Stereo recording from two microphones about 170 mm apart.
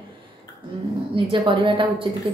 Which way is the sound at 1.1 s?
30° right (ahead or behind).